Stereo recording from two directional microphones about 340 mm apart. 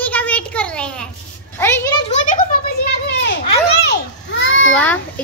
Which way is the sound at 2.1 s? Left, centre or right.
Left.